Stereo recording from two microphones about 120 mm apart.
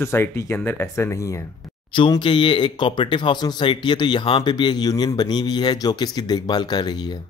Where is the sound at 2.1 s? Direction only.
40° left (ahead or behind).